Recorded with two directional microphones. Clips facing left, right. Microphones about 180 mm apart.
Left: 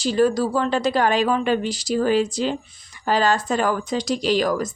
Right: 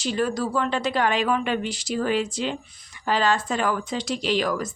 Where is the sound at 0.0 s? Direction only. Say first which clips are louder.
Left 6 dB; 35° left (ahead or behind).